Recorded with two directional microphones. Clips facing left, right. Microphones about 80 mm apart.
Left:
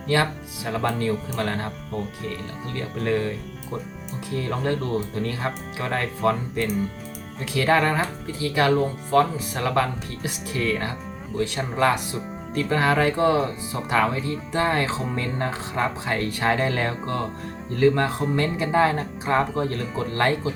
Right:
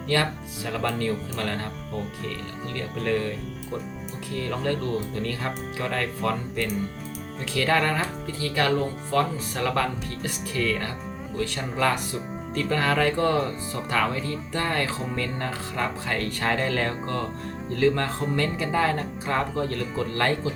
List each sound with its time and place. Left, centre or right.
0.1 s speech: centre
2.7 s speech: left
4.4 s speech: left
7.5 s speech: centre